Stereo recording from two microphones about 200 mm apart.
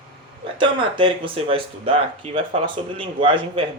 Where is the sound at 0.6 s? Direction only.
25° right (ahead or behind).